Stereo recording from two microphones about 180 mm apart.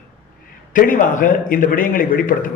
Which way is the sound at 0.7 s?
50° left (ahead or behind).